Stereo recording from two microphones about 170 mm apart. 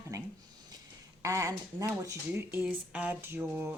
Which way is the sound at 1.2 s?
20° right (ahead or behind).